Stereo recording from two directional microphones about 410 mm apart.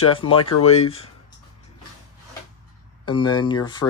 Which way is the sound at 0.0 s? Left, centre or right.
Centre.